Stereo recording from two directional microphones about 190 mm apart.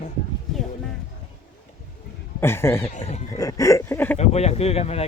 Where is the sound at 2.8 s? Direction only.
35° left (ahead or behind).